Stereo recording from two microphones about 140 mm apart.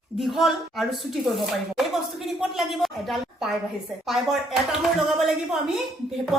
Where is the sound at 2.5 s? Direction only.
Centre (ahead or behind).